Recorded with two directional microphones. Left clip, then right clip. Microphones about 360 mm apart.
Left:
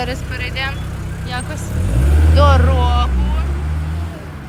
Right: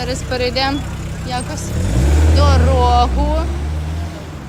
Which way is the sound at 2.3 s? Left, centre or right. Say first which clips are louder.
Left 2 dB; centre.